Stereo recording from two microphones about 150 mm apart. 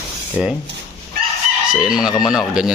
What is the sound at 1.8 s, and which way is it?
Speech, 5° right (ahead or behind).